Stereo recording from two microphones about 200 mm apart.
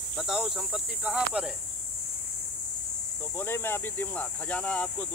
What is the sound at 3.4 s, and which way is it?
Speech, 10° left (ahead or behind).